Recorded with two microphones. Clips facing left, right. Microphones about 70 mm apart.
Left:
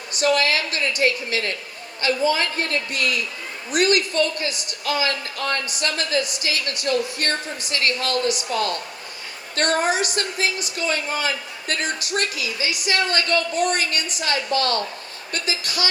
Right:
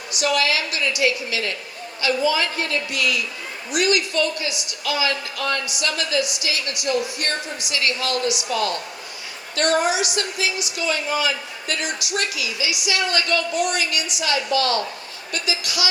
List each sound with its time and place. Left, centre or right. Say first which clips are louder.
0.1 s a woman's voice: left 1 dB; left